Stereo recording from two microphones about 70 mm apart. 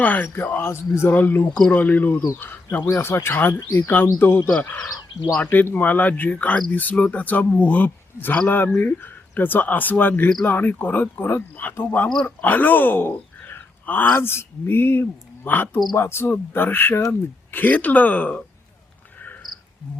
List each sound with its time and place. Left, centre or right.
0.0 s speech: left